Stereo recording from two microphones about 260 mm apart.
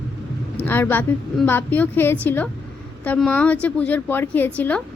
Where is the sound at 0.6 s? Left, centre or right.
Centre.